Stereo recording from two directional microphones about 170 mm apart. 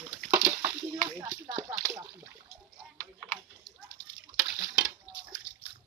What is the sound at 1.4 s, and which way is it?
Speech, 25° right (ahead or behind).